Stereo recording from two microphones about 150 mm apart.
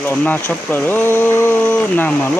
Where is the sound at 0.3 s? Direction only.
10° left (ahead or behind).